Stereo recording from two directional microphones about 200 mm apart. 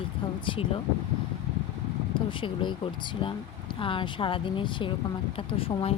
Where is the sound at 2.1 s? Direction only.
25° left (ahead or behind).